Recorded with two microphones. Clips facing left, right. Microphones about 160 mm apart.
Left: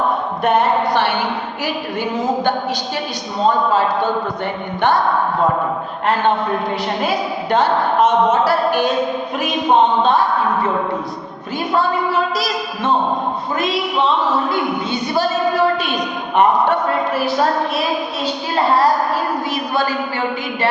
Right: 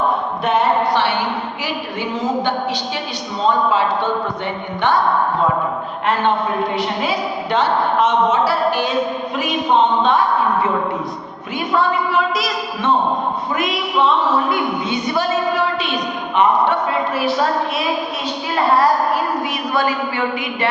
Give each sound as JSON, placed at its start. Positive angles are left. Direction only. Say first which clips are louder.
{"t": 0.4, "sound": "a sound", "louder": "left 1 dB", "side_deg": 50}
{"t": 3.7, "sound": "a woman's voice", "louder": "left 1 dB", "side_deg": 40}
{"t": 7.0, "sound": "a woman's voice", "louder": "left 1 dB", "side_deg": 45}
{"t": 11.7, "sound": "a woman's voice", "louder": "even", "side_deg": 35}
{"t": 14.5, "sound": "a sound", "louder": "even", "side_deg": 30}
{"t": 16.3, "sound": "a woman's voice", "louder": "left 1 dB", "side_deg": 50}
{"t": 18.5, "sound": "child singing", "louder": "even", "side_deg": 30}
{"t": 19.7, "sound": "a woman's voice", "louder": "right 2 dB", "side_deg": 30}